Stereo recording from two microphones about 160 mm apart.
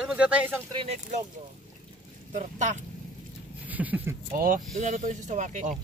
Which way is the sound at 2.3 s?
50° right (ahead or behind).